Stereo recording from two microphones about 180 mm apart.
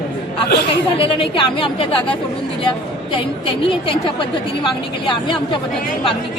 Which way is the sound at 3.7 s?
30° left (ahead or behind).